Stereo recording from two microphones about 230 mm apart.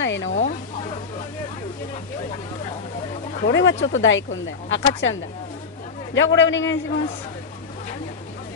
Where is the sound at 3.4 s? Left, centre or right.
Left.